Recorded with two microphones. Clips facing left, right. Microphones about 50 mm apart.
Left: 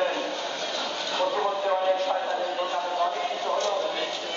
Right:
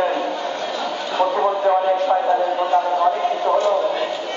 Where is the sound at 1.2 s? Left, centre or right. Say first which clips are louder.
Right 8 dB; centre.